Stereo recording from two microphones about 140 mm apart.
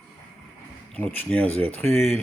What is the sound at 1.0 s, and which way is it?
Speech, 10° left (ahead or behind).